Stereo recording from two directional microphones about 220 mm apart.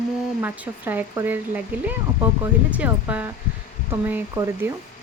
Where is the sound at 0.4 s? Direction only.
10° right (ahead or behind).